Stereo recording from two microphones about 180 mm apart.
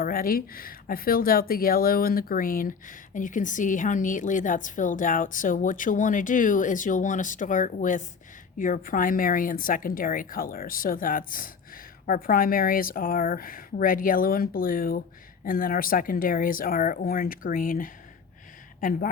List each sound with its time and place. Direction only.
0.0 s speech: 55° left (ahead or behind)